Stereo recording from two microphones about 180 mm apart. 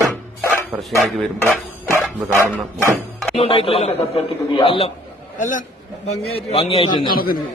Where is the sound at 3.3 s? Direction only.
30° left (ahead or behind).